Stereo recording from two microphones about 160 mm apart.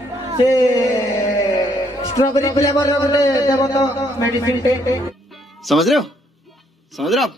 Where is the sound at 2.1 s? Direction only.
20° left (ahead or behind).